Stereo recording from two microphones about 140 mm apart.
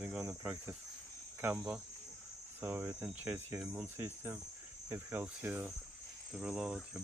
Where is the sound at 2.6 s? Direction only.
15° right (ahead or behind).